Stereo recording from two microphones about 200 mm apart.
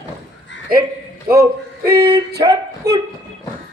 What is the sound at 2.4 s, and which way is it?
Speech, 15° right (ahead or behind).